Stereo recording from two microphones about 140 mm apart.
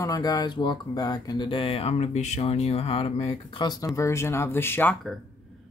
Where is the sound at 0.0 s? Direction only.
25° left (ahead or behind).